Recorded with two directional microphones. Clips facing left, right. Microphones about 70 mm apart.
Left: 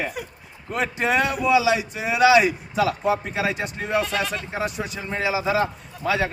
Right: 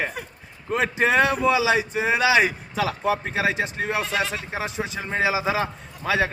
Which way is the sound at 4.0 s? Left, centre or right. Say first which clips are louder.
Even; centre.